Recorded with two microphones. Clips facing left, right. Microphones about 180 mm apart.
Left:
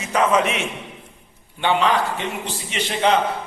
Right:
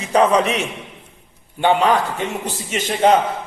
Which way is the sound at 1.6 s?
45° right (ahead or behind).